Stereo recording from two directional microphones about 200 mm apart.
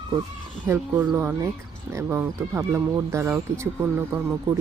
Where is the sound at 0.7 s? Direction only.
10° right (ahead or behind).